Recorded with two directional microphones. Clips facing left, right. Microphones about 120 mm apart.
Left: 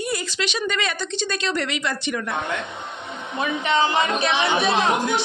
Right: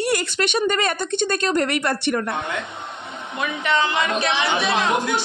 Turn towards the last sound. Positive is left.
turn(degrees=25)  # may be behind; listen again after turning